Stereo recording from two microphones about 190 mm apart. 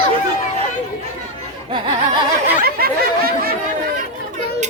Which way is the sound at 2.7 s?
55° right (ahead or behind).